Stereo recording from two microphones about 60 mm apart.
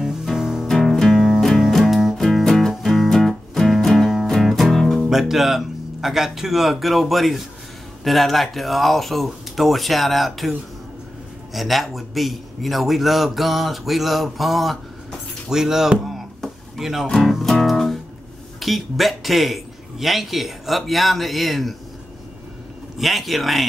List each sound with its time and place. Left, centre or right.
0.0 s music: centre
0.7 s music: centre
5.1 s a man's voice: centre
11.5 s a man's voice: centre
16.1 s a sound: centre
17.3 s music: centre
18.6 s a man's voice: centre
22.9 s a man's voice: centre